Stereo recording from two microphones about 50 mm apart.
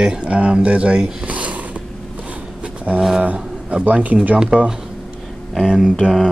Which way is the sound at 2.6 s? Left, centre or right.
Right.